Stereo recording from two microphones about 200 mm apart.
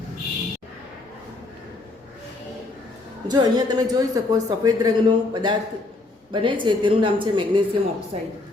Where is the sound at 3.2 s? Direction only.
20° right (ahead or behind).